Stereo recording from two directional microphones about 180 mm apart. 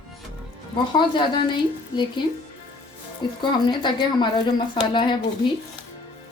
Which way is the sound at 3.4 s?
25° left (ahead or behind).